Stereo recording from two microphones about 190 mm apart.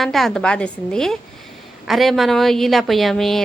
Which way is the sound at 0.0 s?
Centre (ahead or behind).